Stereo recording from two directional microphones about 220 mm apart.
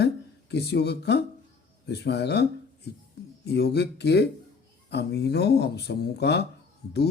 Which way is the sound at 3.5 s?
45° left (ahead or behind).